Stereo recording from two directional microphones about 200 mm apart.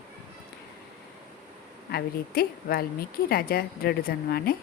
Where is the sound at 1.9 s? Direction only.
50° left (ahead or behind).